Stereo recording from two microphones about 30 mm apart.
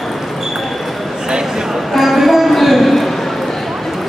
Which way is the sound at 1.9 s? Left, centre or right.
Centre.